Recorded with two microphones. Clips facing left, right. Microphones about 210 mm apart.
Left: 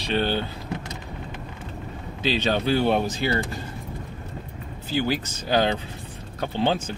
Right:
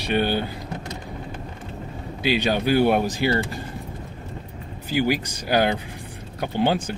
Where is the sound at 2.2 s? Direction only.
10° right (ahead or behind).